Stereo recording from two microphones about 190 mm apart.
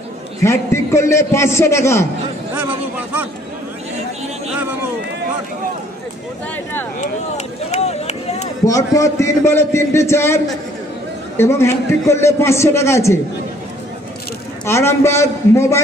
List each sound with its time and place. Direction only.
0.4 s a man's voice: 15° left (ahead or behind)
7.0 s speech: 35° left (ahead or behind)
8.6 s a man's voice: 15° left (ahead or behind)
14.7 s a man's voice: 15° left (ahead or behind)